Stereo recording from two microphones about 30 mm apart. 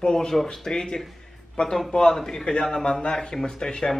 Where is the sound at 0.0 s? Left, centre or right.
Left.